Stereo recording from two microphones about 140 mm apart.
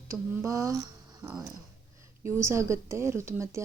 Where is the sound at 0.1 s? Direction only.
20° right (ahead or behind).